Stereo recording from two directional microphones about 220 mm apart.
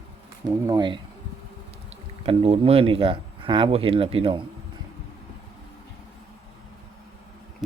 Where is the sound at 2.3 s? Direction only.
25° right (ahead or behind).